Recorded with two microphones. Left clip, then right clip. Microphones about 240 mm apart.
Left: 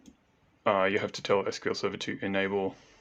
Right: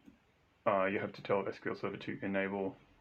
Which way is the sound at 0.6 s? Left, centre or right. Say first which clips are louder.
Left 6 dB; left.